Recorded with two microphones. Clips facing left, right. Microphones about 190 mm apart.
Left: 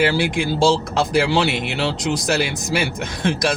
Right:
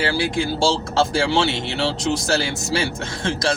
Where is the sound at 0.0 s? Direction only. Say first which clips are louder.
Left 3 dB; 20° left (ahead or behind).